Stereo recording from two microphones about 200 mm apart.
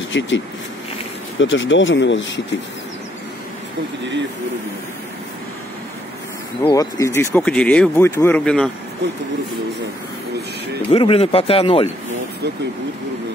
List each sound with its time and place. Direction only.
0.1 s speech: 65° left (ahead or behind)
1.4 s speech: 70° left (ahead or behind)
6.6 s speech: 15° left (ahead or behind)
10.9 s speech: 30° left (ahead or behind)